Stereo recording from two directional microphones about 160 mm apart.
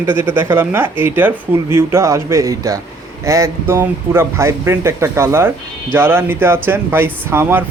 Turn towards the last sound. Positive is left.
turn(degrees=-15)  # may be behind; listen again after turning